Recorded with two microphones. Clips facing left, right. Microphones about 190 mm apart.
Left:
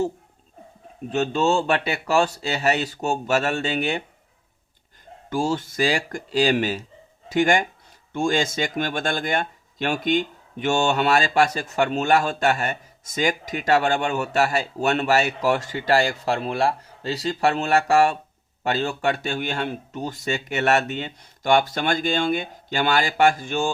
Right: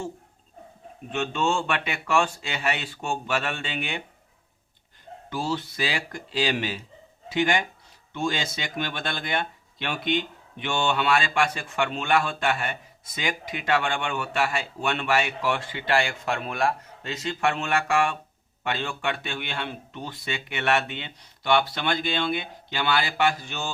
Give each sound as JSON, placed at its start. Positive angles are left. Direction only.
{"t": 1.1, "sound": "speech", "side_deg": 40}
{"t": 5.3, "sound": "speech", "side_deg": 45}